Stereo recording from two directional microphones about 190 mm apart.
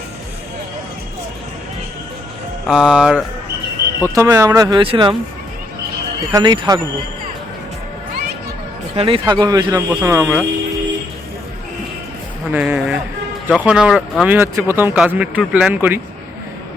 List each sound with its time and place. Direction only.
2.6 s speech: 5° right (ahead or behind)
4.0 s speech: 15° right (ahead or behind)
6.3 s speech: 20° right (ahead or behind)
9.0 s speech: 30° right (ahead or behind); by 10.4 s 10° right (ahead or behind)
12.5 s speech: 5° right (ahead or behind)